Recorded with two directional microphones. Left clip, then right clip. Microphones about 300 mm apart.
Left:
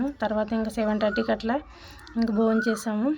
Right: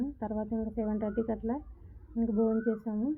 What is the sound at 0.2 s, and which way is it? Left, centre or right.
Speech, centre.